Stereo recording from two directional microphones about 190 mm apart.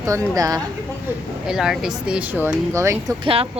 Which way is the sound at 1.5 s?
5° right (ahead or behind).